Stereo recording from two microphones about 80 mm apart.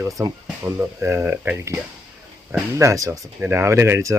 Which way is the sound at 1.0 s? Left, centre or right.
Right.